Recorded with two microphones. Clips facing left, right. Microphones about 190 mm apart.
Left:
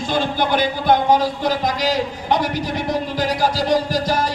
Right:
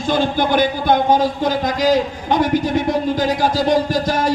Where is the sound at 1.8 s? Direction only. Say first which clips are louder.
Right 6 dB; 50° right (ahead or behind).